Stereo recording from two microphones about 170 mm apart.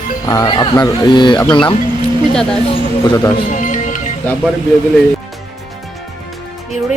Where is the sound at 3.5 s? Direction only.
50° left (ahead or behind).